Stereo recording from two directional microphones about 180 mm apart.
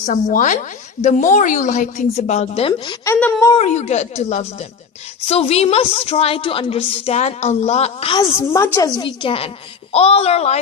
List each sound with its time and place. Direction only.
0.0 s a woman's voice: 45° left (ahead or behind); by 3.2 s 25° left (ahead or behind)
3.2 s speech: 10° left (ahead or behind)
3.5 s a woman's voice: 40° left (ahead or behind)
8.4 s a woman's voice: 15° left (ahead or behind); by 10.6 s 35° left (ahead or behind)